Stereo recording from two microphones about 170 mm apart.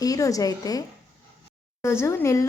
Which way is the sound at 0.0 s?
20° left (ahead or behind).